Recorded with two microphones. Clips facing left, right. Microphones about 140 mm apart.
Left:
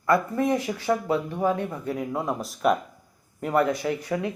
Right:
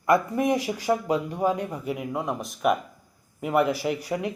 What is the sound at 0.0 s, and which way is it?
Speech, 15° right (ahead or behind).